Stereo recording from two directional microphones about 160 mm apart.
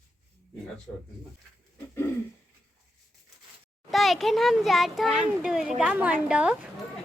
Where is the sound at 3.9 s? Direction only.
Centre (ahead or behind).